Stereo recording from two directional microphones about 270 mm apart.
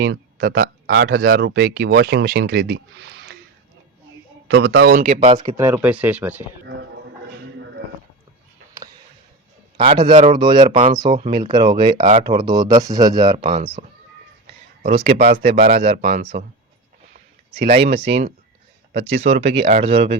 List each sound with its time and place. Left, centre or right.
0.0 s speech: right
4.4 s speech: right
5.0 s speech: right
5.5 s speech: centre
9.7 s speech: centre
14.8 s speech: right
15.2 s speech: right
15.8 s speech: right
17.7 s speech: centre